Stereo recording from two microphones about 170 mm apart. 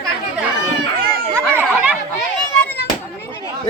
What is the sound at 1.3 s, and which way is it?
Chatter, 10° right (ahead or behind).